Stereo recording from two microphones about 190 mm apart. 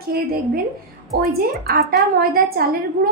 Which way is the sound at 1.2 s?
55° right (ahead or behind).